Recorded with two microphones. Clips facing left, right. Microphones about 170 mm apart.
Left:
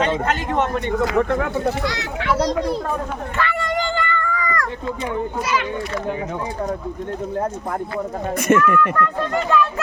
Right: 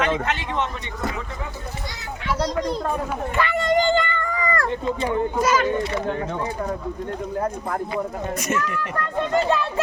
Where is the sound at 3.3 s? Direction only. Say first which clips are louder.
Right 3 dB; 15° right (ahead or behind).